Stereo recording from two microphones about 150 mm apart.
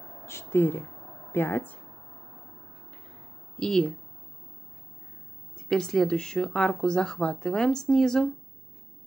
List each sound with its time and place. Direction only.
0.2 s speech: 15° left (ahead or behind)
3.5 s speech: 5° left (ahead or behind)
5.7 s speech: 5° left (ahead or behind)